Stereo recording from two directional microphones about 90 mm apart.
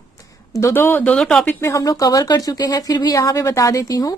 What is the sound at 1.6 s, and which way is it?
A woman's voice, 35° left (ahead or behind).